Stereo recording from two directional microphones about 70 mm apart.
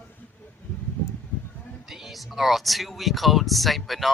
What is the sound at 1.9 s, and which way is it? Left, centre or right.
Speech, centre.